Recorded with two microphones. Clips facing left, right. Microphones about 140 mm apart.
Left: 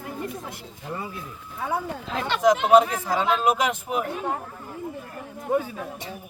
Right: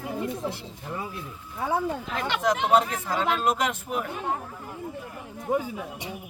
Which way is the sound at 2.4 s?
10° left (ahead or behind).